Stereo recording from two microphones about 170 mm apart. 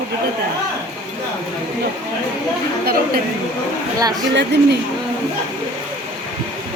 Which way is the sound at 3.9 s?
20° right (ahead or behind).